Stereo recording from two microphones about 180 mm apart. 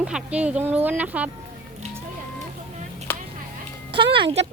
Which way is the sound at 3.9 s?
30° right (ahead or behind).